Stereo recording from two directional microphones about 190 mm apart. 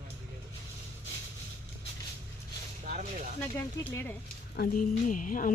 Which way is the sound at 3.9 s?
10° left (ahead or behind).